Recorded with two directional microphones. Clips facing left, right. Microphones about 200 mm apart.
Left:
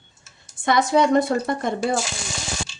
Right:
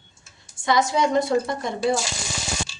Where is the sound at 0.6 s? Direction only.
55° left (ahead or behind).